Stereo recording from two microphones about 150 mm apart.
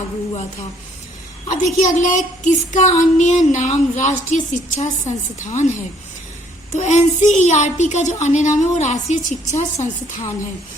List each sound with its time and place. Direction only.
1.5 s a woman's voice: 55° left (ahead or behind)
6.7 s a woman's voice: 50° left (ahead or behind)